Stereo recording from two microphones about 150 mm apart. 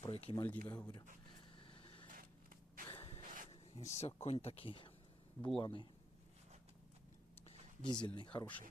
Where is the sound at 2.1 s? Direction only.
70° right (ahead or behind).